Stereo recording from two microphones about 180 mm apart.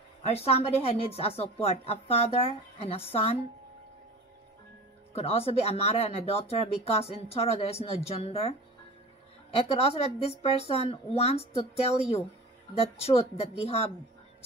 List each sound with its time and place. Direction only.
0.3 s speech: 35° left (ahead or behind)
5.1 s speech: 35° left (ahead or behind)